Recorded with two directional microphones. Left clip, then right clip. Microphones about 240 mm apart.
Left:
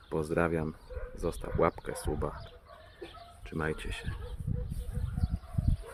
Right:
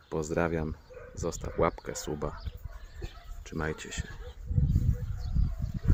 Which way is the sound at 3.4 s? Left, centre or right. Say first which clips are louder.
Even; centre.